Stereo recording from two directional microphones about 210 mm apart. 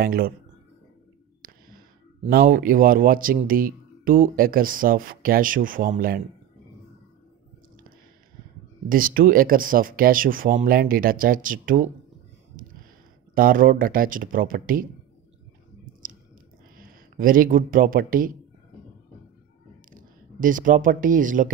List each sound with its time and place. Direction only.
0.0 s speech: 45° right (ahead or behind)
2.2 s speech: 45° right (ahead or behind)
8.8 s speech: 40° right (ahead or behind)
12.6 s a sound: 40° right (ahead or behind)
13.3 s speech: 40° right (ahead or behind)
15.8 s a sound: 40° right (ahead or behind)
16.7 s speech: 40° right (ahead or behind)
19.9 s speech: 40° right (ahead or behind)